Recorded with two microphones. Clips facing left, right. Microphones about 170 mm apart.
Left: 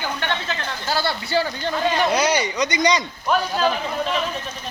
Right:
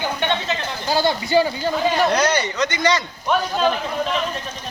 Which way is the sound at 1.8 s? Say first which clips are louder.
Right 1 dB; centre (ahead or behind).